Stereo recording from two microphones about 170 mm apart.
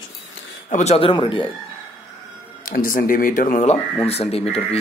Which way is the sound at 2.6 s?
55° left (ahead or behind).